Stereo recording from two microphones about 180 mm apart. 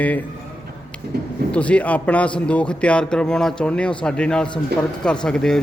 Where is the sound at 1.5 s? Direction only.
5° left (ahead or behind).